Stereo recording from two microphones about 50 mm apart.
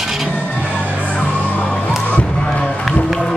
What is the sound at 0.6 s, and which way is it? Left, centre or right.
Music, right.